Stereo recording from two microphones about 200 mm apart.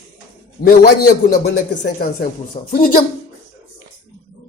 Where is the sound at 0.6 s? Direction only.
45° left (ahead or behind).